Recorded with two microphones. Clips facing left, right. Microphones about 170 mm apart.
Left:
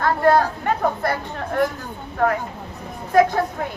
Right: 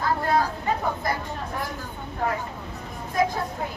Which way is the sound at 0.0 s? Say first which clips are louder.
Left 6 dB; 70° left (ahead or behind).